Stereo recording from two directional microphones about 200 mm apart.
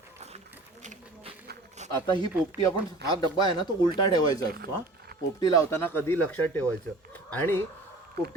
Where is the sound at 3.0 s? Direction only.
55° right (ahead or behind).